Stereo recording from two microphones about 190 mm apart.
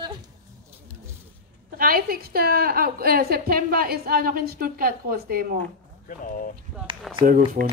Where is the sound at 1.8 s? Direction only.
50° right (ahead or behind).